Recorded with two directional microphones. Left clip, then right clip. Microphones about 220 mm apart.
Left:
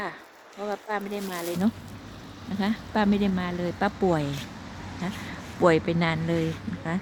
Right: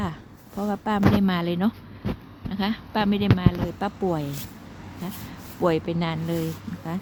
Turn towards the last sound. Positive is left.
turn(degrees=-10)  # may be behind; listen again after turning